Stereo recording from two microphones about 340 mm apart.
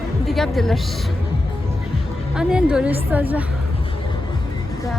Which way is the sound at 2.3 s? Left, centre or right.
Centre.